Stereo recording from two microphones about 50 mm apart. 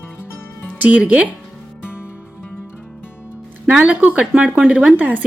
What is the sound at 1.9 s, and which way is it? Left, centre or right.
Music, left.